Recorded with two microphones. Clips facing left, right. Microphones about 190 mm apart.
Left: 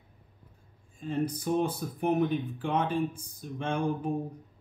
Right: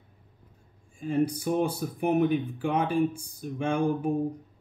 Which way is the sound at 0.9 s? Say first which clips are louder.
Right 5 dB; 10° right (ahead or behind).